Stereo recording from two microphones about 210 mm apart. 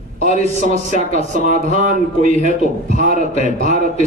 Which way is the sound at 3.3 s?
30° left (ahead or behind).